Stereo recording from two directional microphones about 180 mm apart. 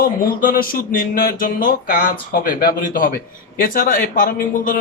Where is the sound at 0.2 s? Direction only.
50° left (ahead or behind).